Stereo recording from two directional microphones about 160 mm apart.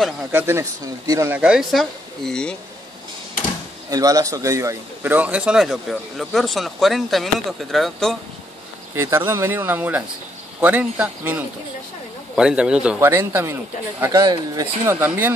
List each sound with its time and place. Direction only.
0.3 s speech: 15° right (ahead or behind)
1.3 s a man's voice: 5° right (ahead or behind)
3.9 s a man's voice: 20° right (ahead or behind); by 8.2 s centre (ahead or behind)
8.9 s speech: 15° right (ahead or behind)